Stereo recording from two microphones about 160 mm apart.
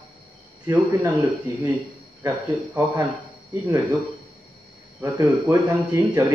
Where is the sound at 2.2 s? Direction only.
10° right (ahead or behind).